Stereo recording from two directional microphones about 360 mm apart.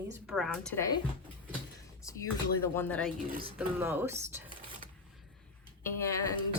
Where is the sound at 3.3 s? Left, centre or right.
Right.